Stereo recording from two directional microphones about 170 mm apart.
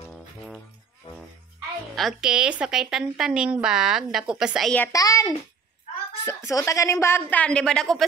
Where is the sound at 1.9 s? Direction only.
Centre (ahead or behind).